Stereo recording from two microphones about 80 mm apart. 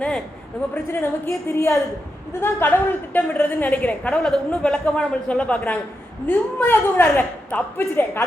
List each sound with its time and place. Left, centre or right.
0.7 s a woman's voice: left
2.4 s a woman's voice: left